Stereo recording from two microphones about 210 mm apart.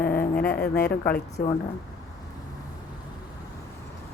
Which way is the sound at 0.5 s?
45° left (ahead or behind).